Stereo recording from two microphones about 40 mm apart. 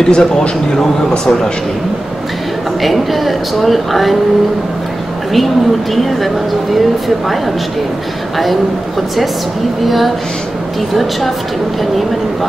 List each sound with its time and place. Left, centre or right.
0.1 s a man's voice: centre
2.8 s speech: centre
6.0 s speech: centre
9.8 s speech: centre